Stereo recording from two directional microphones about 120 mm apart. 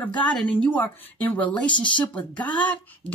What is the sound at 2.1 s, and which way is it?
Speech, 10° left (ahead or behind).